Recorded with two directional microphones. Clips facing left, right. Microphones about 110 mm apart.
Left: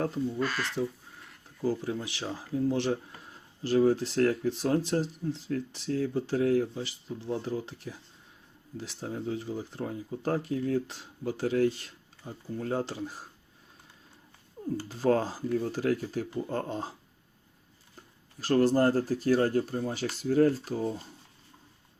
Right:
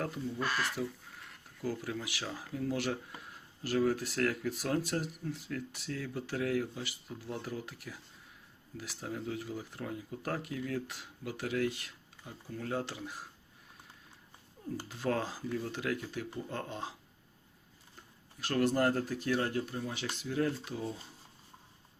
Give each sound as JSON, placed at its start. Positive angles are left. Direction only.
{"t": 0.0, "sound": "speech", "side_deg": 30}
{"t": 0.4, "sound": "speech", "side_deg": -10}
{"t": 1.6, "sound": "speech", "side_deg": 30}
{"t": 14.8, "sound": "speech", "side_deg": 35}
{"t": 18.3, "sound": "speech", "side_deg": 35}